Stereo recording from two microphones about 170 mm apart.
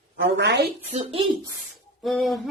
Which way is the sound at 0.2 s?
85° right.